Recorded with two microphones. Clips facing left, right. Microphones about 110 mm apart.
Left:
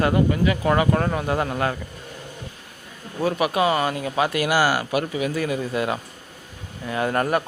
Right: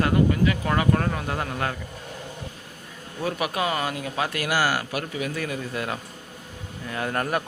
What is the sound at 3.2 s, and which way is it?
A man's voice, centre (ahead or behind).